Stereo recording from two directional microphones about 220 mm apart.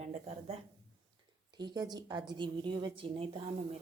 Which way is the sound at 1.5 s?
20° right (ahead or behind).